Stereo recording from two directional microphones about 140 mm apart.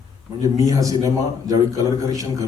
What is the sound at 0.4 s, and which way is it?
A man's voice, 25° right (ahead or behind).